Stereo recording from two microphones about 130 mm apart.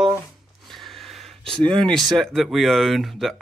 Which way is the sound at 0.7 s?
Centre (ahead or behind).